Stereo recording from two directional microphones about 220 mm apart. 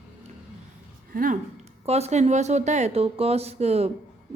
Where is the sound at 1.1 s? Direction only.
40° right (ahead or behind).